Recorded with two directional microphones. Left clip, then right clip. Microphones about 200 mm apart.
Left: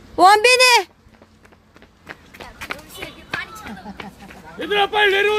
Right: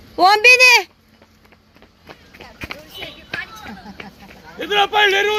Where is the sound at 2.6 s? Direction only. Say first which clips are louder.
Even; 55° left (ahead or behind).